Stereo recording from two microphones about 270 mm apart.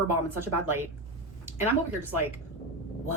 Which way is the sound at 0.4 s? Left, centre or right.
Centre.